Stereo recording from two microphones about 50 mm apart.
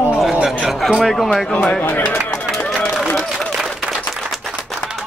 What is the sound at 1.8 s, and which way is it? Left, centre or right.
Speech, left.